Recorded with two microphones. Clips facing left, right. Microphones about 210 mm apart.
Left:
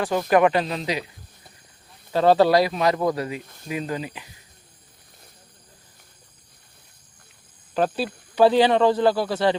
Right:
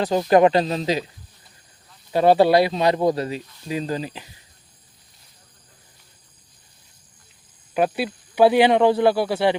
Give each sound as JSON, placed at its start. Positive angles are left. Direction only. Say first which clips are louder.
{"t": 0.0, "sound": "speech", "louder": "right 3 dB", "side_deg": -25}
{"t": 2.1, "sound": "speech", "louder": "right 2 dB", "side_deg": -15}
{"t": 3.4, "sound": "speech", "louder": "right 1 dB", "side_deg": 50}
{"t": 3.7, "sound": "speech", "louder": "right 2 dB", "side_deg": -30}
{"t": 7.7, "sound": "speech", "louder": "right 2 dB", "side_deg": -10}